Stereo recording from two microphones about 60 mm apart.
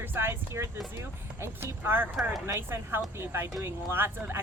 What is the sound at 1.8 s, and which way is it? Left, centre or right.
Speech, right.